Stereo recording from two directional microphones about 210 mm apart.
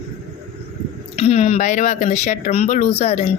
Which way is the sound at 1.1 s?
30° left (ahead or behind).